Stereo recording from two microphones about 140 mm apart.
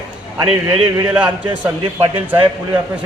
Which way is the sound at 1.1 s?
10° right (ahead or behind).